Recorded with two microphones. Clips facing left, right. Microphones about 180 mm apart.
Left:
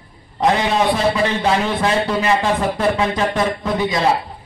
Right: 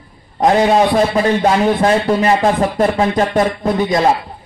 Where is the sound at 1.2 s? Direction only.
45° right (ahead or behind).